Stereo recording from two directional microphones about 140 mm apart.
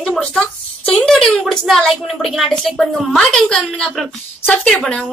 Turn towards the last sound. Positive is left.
turn(degrees=5)  # may be behind; listen again after turning